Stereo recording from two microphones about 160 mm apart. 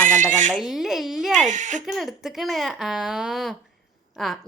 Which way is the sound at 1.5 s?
50° right (ahead or behind).